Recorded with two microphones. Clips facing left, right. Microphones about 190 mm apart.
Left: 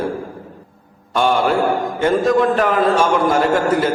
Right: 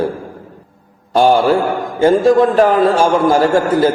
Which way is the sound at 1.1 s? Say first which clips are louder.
Right 5 dB; 35° right (ahead or behind).